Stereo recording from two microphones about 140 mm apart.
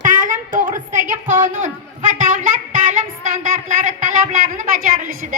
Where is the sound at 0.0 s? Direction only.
65° right (ahead or behind).